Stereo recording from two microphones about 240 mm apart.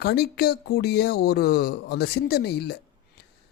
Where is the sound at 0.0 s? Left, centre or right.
Left.